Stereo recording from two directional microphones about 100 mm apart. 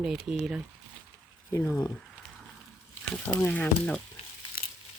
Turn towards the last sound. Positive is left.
turn(degrees=15)  # may be behind; listen again after turning